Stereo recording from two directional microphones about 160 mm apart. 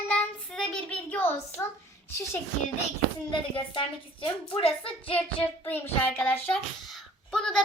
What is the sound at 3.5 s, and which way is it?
A woman's voice, 35° left (ahead or behind).